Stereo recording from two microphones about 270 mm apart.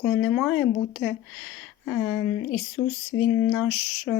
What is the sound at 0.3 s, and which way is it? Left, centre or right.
Speech, centre.